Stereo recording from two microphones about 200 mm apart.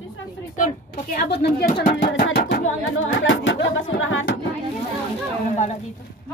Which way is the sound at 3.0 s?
75° left (ahead or behind).